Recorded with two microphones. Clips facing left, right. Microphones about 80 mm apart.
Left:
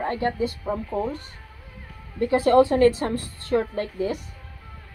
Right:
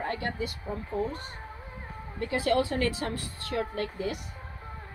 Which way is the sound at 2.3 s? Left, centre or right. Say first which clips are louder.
Left 9 dB; left.